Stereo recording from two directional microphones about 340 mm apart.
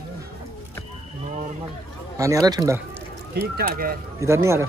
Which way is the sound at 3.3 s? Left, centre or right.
Right.